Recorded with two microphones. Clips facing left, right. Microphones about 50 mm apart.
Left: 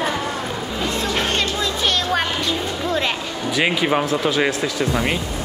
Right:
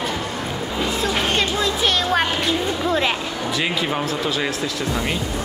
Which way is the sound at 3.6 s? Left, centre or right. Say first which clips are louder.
Left 6 dB; left.